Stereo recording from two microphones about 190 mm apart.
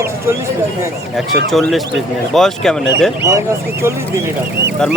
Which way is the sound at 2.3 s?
Centre (ahead or behind).